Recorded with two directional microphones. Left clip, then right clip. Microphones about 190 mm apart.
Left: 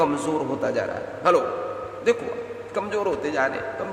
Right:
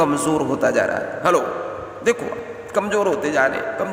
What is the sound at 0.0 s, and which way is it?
A man's voice, 30° right (ahead or behind).